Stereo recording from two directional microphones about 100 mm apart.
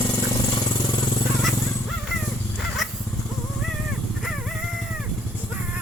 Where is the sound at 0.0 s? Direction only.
30° left (ahead or behind).